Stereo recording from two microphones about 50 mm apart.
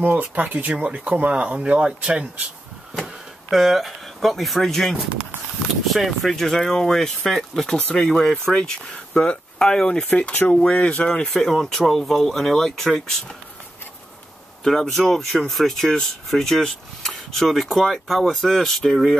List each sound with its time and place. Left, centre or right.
0.0 s speech: right
3.0 s speech: centre
10.0 s speech: left
11.3 s speech: centre
14.6 s speech: centre